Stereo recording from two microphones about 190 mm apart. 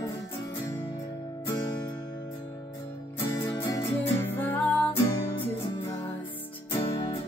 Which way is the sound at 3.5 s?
15° left (ahead or behind).